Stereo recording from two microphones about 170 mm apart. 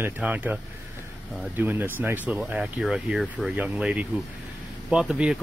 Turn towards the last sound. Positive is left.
turn(degrees=-5)  # may be behind; listen again after turning